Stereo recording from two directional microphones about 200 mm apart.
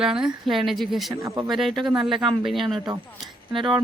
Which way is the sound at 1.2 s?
15° right (ahead or behind).